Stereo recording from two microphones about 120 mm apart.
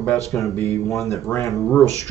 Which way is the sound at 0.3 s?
20° left (ahead or behind).